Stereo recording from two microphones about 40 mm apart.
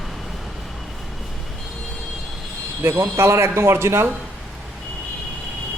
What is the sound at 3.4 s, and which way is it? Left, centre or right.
Speech, right.